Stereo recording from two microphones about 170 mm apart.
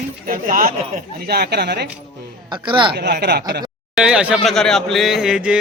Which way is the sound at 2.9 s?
75° right (ahead or behind).